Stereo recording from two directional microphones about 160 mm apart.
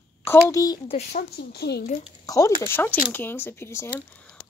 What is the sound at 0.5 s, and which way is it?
Speech, 20° left (ahead or behind).